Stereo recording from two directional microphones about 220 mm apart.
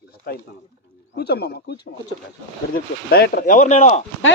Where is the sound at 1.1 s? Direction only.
45° left (ahead or behind).